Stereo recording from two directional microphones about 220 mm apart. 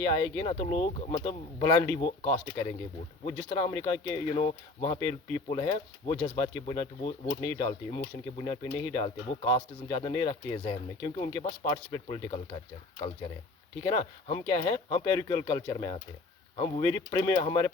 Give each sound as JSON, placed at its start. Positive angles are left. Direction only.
{"t": 0.0, "sound": "speech", "side_deg": 15}
{"t": 13.8, "sound": "speech", "side_deg": 25}